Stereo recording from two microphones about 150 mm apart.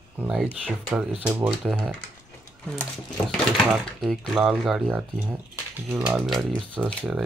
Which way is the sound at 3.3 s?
5° left (ahead or behind).